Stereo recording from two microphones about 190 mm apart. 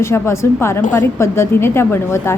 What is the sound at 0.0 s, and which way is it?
Speech, 15° left (ahead or behind).